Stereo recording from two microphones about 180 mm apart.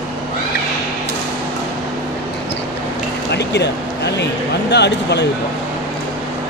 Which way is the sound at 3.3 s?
70° left (ahead or behind).